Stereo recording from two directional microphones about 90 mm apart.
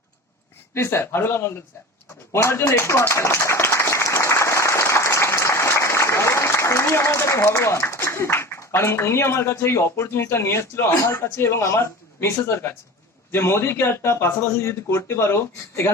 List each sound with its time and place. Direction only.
0.7 s a man's voice: 30° left (ahead or behind)
2.3 s clapping: 30° left (ahead or behind)
11.1 s a man's voice: 30° left (ahead or behind)